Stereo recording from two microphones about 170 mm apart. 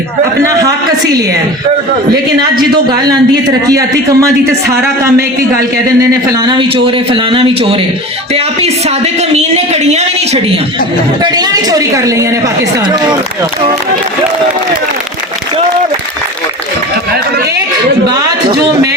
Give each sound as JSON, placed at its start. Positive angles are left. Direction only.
{"t": 0.4, "sound": "a man's voice", "side_deg": -20}
{"t": 3.1, "sound": "a man's voice", "side_deg": -20}
{"t": 4.6, "sound": "speech", "side_deg": -70}
{"t": 6.0, "sound": "a man's voice", "side_deg": -20}
{"t": 11.2, "sound": "a man's voice", "side_deg": -25}
{"t": 18.1, "sound": "speech", "side_deg": -25}